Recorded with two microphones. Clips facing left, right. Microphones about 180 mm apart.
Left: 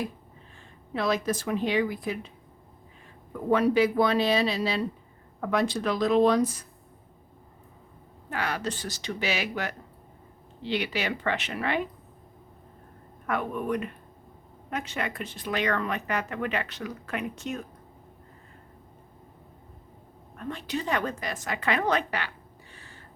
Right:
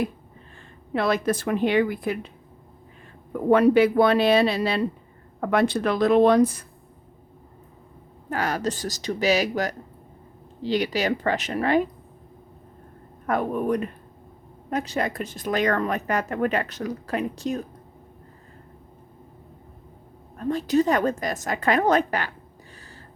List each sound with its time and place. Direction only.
0.9 s a woman's voice: 60° right (ahead or behind)
3.5 s a woman's voice: 60° right (ahead or behind)
8.3 s speech: 40° right (ahead or behind)
13.2 s speech: 40° right (ahead or behind)
20.3 s a woman's voice: 35° right (ahead or behind)
22.7 s a sound: 40° right (ahead or behind)